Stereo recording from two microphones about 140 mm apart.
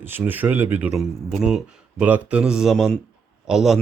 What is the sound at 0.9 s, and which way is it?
Speech, 5° right (ahead or behind).